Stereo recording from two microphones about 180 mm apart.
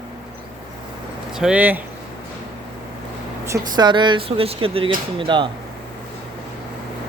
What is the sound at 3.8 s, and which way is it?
Speech, 25° right (ahead or behind).